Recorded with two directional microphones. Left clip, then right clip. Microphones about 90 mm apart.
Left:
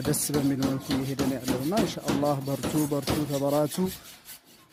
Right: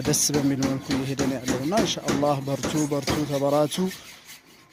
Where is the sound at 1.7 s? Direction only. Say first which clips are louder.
Right 5 dB; 15° left (ahead or behind).